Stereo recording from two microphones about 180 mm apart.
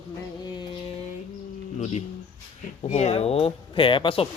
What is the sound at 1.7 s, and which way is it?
Speech, 40° left (ahead or behind).